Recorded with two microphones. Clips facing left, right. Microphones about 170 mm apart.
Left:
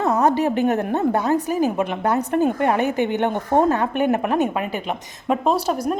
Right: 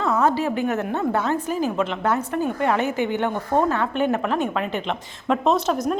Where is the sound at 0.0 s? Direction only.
45° left (ahead or behind).